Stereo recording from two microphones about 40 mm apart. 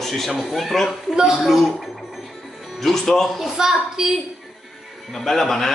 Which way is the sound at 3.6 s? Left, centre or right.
Centre.